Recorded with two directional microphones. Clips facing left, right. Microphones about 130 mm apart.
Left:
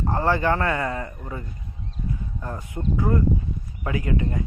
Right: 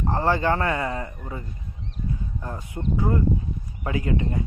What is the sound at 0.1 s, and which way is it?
Speech, 25° right (ahead or behind).